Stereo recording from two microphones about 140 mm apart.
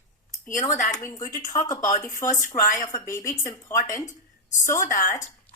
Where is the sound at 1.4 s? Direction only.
60° left (ahead or behind).